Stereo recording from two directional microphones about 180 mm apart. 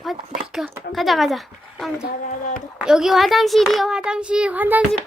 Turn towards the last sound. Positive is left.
turn(degrees=-10)  # may be behind; listen again after turning